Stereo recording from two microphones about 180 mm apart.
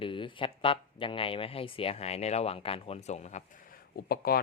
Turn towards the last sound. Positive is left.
turn(degrees=60)  # may be behind; listen again after turning